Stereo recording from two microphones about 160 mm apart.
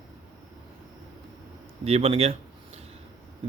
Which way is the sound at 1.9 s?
40° right (ahead or behind).